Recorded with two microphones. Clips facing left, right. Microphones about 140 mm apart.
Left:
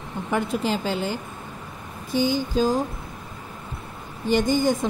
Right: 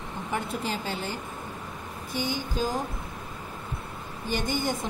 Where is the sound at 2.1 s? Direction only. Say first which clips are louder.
Left 8 dB; 90° left.